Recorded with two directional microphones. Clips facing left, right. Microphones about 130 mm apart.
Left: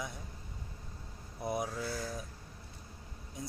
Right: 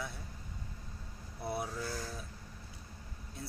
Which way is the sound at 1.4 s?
15° left (ahead or behind).